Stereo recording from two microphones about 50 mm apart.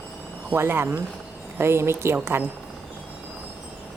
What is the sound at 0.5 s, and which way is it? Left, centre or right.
Speech, right.